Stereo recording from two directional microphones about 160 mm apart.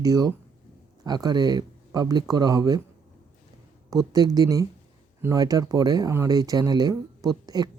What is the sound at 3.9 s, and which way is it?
Speech, 25° right (ahead or behind).